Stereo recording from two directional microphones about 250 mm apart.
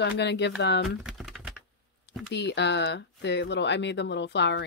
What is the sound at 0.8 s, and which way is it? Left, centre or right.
Typing, centre.